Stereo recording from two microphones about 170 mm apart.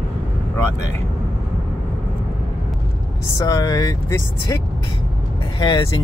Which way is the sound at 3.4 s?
20° left (ahead or behind).